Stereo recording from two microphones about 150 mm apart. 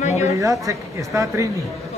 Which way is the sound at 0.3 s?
20° right (ahead or behind).